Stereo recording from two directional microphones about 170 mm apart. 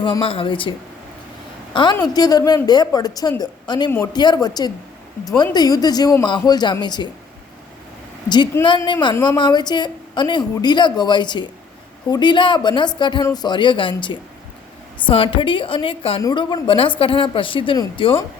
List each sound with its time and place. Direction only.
0.0 s a woman's voice: 30° left (ahead or behind)
1.7 s a woman's voice: 25° left (ahead or behind)
8.6 s a woman's voice: 30° left (ahead or behind)